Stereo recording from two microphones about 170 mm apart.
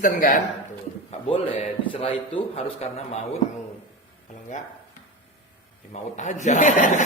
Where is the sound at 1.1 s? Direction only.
35° left (ahead or behind).